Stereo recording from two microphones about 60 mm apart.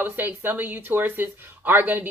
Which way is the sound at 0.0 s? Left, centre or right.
Right.